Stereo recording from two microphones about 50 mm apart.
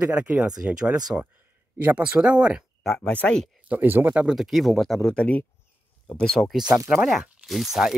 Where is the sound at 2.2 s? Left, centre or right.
Right.